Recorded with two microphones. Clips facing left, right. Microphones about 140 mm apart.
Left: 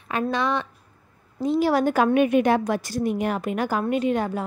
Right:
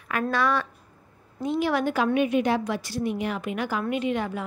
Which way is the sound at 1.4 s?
35° left (ahead or behind).